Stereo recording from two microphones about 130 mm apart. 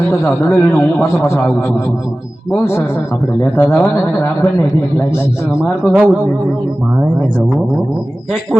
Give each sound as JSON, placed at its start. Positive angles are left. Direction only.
{"t": 0.1, "sound": "a man's voice", "side_deg": 15}
{"t": 5.8, "sound": "speech", "side_deg": -5}